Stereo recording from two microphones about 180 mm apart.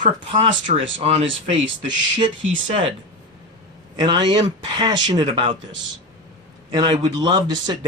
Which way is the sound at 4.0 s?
25° right (ahead or behind).